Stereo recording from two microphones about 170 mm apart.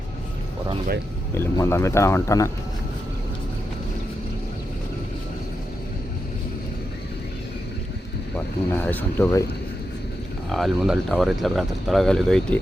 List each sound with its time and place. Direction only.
1.3 s speech: 15° left (ahead or behind)
8.7 s speech: 10° left (ahead or behind)
10.5 s speech: centre (ahead or behind)